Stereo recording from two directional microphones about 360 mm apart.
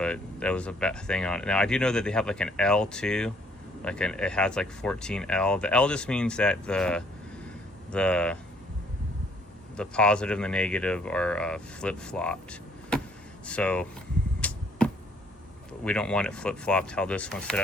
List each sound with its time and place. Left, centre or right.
0.0 s speech: centre
9.7 s speech: centre
14.4 s arrow: centre
15.8 s speech: centre